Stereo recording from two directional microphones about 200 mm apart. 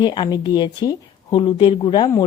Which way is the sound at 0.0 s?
20° left (ahead or behind).